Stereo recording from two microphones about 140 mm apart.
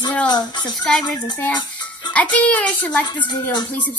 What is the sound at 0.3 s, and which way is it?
Speech, 30° left (ahead or behind).